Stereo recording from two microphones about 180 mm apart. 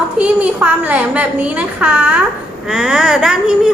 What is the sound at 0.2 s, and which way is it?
A child's voice, 5° right (ahead or behind).